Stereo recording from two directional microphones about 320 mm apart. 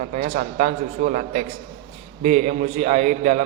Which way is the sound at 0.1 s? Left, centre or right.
Right.